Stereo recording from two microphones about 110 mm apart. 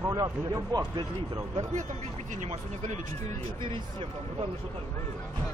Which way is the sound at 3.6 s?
50° right (ahead or behind).